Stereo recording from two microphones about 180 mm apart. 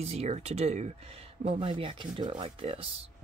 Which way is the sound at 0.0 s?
35° right (ahead or behind).